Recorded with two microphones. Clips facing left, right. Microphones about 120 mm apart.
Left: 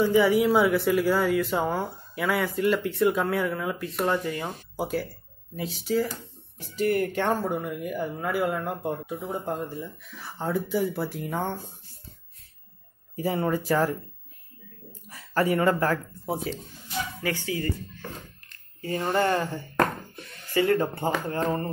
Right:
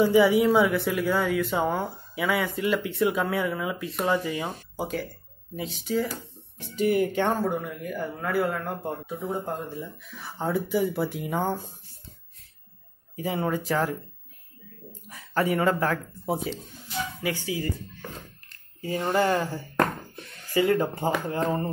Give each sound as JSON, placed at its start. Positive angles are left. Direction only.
{"t": 0.0, "sound": "speech", "side_deg": -5}
{"t": 9.2, "sound": "speech", "side_deg": 0}
{"t": 13.2, "sound": "speech", "side_deg": 0}
{"t": 15.0, "sound": "a sound", "side_deg": 0}
{"t": 15.5, "sound": "speech", "side_deg": 0}
{"t": 17.2, "sound": "speech", "side_deg": -15}